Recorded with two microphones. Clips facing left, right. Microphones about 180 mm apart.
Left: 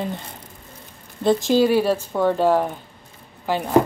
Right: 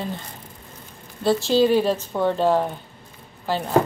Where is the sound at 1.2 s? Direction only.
15° left (ahead or behind).